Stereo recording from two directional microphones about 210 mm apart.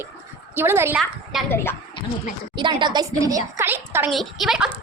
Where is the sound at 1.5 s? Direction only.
10° left (ahead or behind).